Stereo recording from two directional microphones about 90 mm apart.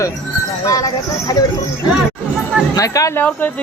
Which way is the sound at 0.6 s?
40° left (ahead or behind).